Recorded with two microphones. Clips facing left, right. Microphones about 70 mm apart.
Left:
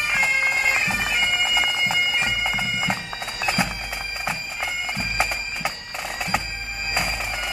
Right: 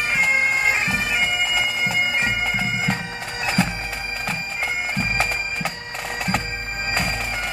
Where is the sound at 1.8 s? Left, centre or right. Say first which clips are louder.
Right 1 dB; right.